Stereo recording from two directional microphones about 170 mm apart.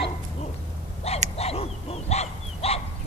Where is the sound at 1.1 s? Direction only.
40° left (ahead or behind).